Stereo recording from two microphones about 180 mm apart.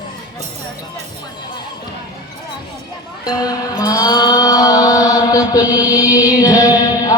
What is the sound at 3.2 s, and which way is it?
Music, 20° left (ahead or behind).